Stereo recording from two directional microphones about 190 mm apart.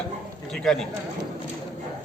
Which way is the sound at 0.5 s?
5° left (ahead or behind).